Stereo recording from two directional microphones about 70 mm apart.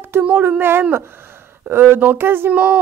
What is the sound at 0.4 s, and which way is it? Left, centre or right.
A woman's voice, right.